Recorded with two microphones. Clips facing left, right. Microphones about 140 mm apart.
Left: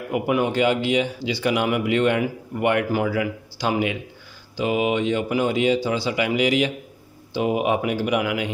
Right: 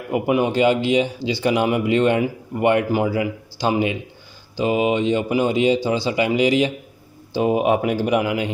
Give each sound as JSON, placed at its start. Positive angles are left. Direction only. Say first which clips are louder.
{"t": 0.1, "sound": "speech", "louder": "right 3 dB", "side_deg": -25}